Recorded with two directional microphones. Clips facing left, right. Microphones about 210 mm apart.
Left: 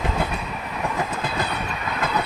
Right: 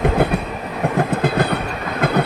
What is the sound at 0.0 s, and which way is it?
Train, 60° right (ahead or behind).